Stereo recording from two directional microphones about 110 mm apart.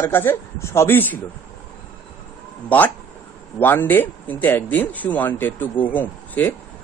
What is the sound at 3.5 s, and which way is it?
Speech, 20° left (ahead or behind).